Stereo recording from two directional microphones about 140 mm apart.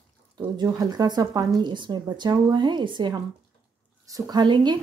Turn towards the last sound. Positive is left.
turn(degrees=-30)  # may be behind; listen again after turning